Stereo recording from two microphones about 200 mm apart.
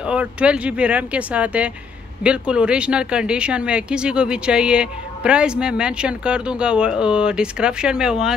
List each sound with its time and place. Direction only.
0.0 s speech: 5° right (ahead or behind)